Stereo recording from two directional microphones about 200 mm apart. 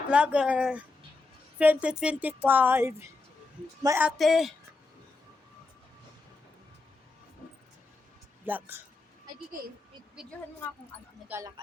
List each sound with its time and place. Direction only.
0.1 s a woman's voice: 5° right (ahead or behind)
8.4 s a woman's voice: 10° right (ahead or behind)
11.3 s a woman's voice: 15° right (ahead or behind)